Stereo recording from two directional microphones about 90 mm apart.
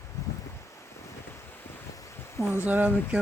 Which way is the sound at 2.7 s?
15° right (ahead or behind).